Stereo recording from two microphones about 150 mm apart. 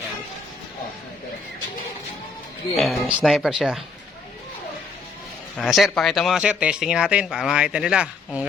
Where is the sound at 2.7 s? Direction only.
Centre (ahead or behind).